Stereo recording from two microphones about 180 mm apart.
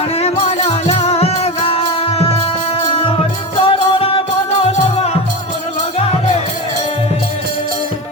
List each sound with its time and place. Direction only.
0.2 s music: 35° left (ahead or behind)
3.6 s music: 30° left (ahead or behind)